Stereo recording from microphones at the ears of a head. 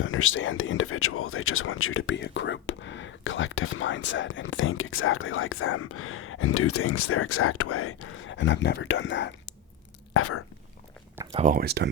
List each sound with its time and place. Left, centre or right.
0.0 s speech: left
11.3 s speech: right